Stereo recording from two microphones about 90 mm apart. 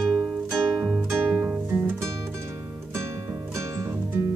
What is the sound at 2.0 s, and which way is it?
Music, 30° right (ahead or behind).